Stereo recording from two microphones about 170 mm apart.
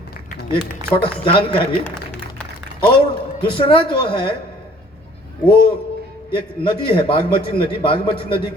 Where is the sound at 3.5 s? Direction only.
30° left (ahead or behind).